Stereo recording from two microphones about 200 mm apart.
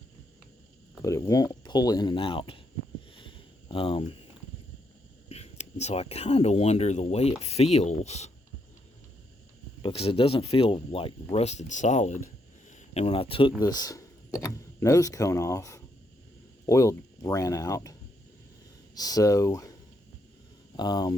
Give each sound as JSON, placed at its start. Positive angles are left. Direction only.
{"t": 1.0, "sound": "speech", "side_deg": 15}
{"t": 3.2, "sound": "a sound", "side_deg": 25}
{"t": 5.3, "sound": "speech", "side_deg": 30}
{"t": 9.8, "sound": "speech", "side_deg": 30}
{"t": 18.9, "sound": "speech", "side_deg": 20}
{"t": 20.7, "sound": "speech", "side_deg": 20}